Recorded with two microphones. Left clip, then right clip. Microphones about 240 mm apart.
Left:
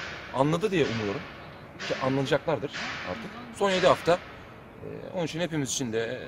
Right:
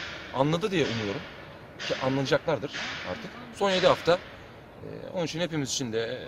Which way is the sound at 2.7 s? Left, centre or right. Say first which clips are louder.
Even; right.